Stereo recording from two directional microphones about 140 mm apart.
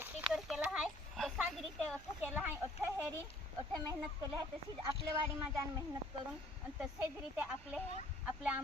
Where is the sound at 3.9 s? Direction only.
30° right (ahead or behind).